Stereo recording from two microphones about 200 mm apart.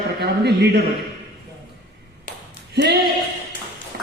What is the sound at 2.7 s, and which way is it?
Speech, 55° right (ahead or behind).